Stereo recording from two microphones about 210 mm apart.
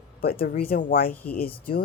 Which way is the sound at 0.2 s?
45° left (ahead or behind).